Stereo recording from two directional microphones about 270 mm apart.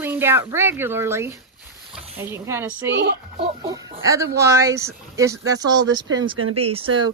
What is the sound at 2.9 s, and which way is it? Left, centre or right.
Speech, right.